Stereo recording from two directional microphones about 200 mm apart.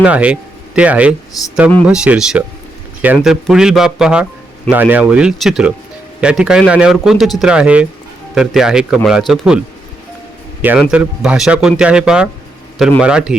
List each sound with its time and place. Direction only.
0.0 s speech: 5° right (ahead or behind)
1.4 s speech: 15° left (ahead or behind)
1.9 s speech: 5° right (ahead or behind)
10.6 s speech: 5° right (ahead or behind)